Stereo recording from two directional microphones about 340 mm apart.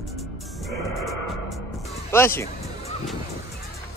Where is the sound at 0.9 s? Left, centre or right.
Right.